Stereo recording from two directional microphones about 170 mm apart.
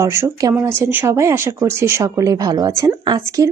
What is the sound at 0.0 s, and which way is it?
Speech, 15° right (ahead or behind).